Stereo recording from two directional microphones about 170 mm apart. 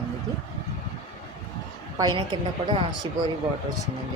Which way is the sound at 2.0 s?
25° right (ahead or behind).